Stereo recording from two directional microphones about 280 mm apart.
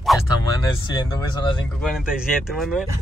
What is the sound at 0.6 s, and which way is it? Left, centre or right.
Speech, centre.